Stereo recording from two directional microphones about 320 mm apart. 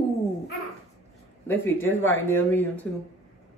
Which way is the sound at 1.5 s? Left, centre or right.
Centre.